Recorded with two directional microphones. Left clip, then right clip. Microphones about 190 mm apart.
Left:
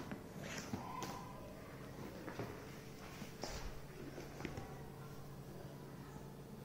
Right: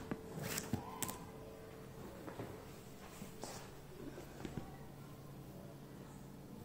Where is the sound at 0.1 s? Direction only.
60° right (ahead or behind).